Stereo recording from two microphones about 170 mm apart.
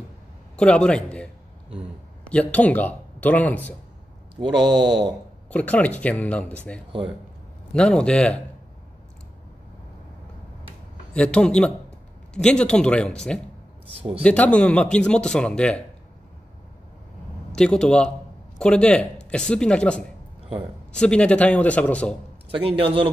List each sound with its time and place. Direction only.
0.6 s speech: 5° left (ahead or behind)
4.4 s speech: 25° right (ahead or behind)
5.5 s speech: 10° left (ahead or behind)
11.1 s speech: 5° left (ahead or behind)
13.9 s a man's voice: 35° right (ahead or behind)
14.2 s speech: 5° left (ahead or behind)
17.6 s speech: 5° left (ahead or behind)
22.6 s a man's voice: 35° right (ahead or behind)